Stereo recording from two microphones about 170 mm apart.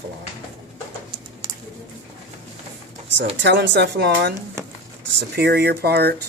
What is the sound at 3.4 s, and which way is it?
Speech, 90° right.